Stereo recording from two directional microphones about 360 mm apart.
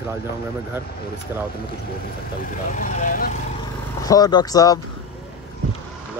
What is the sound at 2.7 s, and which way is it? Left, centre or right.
Speech, left.